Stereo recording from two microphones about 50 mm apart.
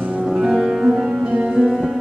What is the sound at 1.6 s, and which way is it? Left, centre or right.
Music, centre.